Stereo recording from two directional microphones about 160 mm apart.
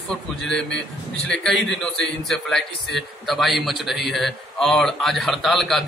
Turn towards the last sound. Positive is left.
turn(degrees=0)  # may be behind; listen again after turning